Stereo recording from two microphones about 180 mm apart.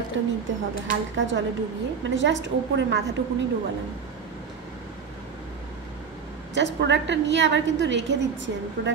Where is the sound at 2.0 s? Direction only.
90° right.